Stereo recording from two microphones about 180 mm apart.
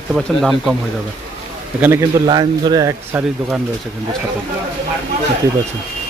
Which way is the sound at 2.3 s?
25° right (ahead or behind).